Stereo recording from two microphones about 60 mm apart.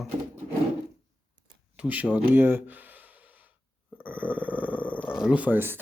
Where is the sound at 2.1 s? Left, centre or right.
Right.